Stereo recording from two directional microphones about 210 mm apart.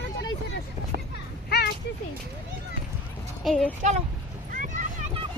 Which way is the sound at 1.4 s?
50° left (ahead or behind).